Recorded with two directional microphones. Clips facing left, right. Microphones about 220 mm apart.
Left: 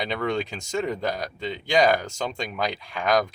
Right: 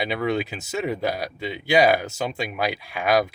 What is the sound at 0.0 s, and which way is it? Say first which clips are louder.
Speech: right 2 dB; 5° right (ahead or behind).